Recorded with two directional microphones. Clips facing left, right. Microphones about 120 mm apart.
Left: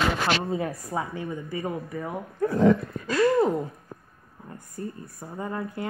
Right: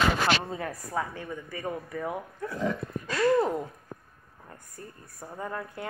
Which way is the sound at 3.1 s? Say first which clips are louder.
Left 3 dB; 10° left (ahead or behind).